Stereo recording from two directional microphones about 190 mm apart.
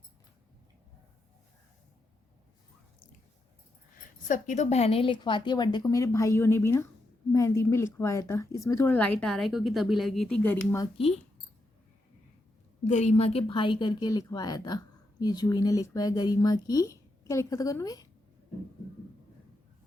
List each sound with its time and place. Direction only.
4.3 s a woman's voice: 40° left (ahead or behind); by 10.8 s 10° left (ahead or behind)
12.8 s a woman's voice: 35° left (ahead or behind); by 18.0 s 20° left (ahead or behind)